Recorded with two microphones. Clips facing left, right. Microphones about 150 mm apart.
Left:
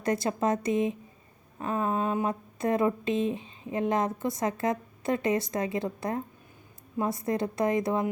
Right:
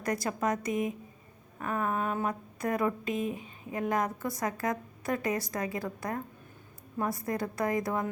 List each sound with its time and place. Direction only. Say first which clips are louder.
0.0 s speech: left 4 dB; 25° left (ahead or behind)